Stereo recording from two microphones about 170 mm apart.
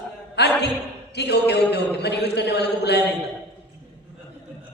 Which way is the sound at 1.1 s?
80° left.